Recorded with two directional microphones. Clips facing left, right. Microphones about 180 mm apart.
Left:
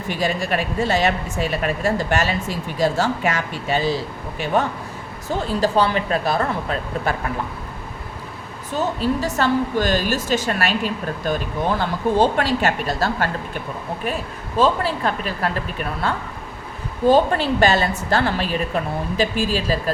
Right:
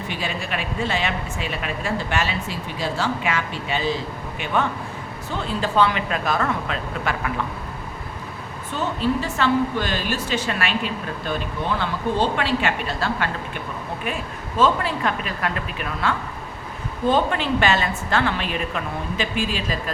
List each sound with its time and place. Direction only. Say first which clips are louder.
0.1 s a woman's voice: left 8 dB; 45° left (ahead or behind)
8.7 s a woman's voice: left 2 dB; 40° left (ahead or behind)
14.6 s a woman's voice: left 1 dB; 35° left (ahead or behind)